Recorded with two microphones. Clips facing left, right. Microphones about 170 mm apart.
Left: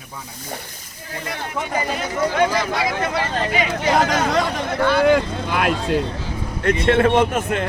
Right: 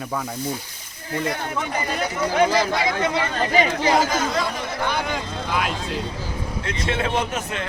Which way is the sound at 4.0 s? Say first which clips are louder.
Left 3 dB; 70° left (ahead or behind).